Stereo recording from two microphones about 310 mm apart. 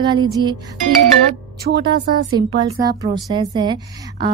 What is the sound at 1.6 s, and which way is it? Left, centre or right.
Speech, right.